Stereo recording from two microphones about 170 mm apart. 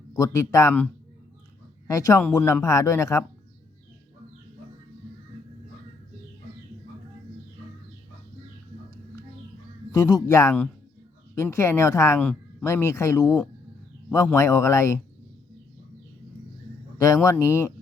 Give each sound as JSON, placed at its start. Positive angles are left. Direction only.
{"t": 0.1, "sound": "speech", "side_deg": 15}
{"t": 1.9, "sound": "a man's voice", "side_deg": 20}
{"t": 9.9, "sound": "a man's voice", "side_deg": 20}
{"t": 12.2, "sound": "a sound", "side_deg": 5}
{"t": 12.6, "sound": "speech", "side_deg": 15}
{"t": 17.2, "sound": "speech", "side_deg": 15}